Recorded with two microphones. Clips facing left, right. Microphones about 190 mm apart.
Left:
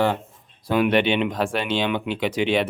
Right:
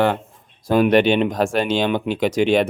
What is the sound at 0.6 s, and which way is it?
Speech, 40° right (ahead or behind).